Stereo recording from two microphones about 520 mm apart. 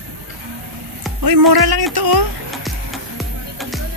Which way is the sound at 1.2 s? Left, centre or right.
Right.